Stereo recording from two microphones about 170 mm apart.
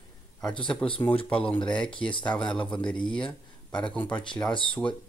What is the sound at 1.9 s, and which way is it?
Speech, 30° left (ahead or behind).